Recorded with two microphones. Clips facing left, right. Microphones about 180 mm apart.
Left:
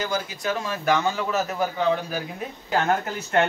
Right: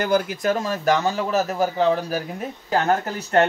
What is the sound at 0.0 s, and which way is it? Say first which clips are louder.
A man's voice: right 7 dB; 55° right (ahead or behind).